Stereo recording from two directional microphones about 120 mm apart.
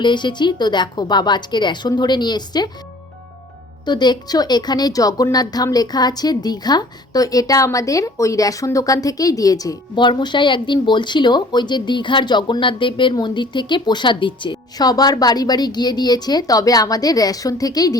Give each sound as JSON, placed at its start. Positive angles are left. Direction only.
{"t": 0.0, "sound": "a woman's voice", "side_deg": 40}
{"t": 3.8, "sound": "a woman's voice", "side_deg": 35}